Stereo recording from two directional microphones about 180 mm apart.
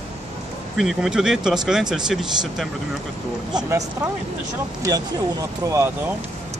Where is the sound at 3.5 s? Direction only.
15° right (ahead or behind).